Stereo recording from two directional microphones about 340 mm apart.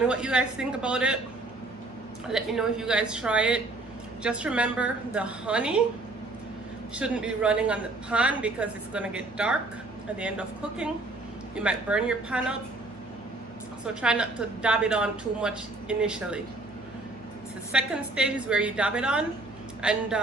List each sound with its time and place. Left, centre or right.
0.1 s speech: centre
2.3 s speech: centre
6.9 s speech: centre
13.8 s speech: centre
17.7 s speech: centre